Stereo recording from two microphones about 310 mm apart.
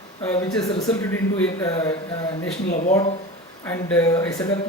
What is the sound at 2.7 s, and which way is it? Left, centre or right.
Speech, left.